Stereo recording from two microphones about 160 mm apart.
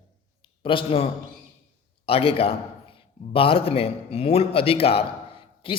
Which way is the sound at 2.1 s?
35° left (ahead or behind).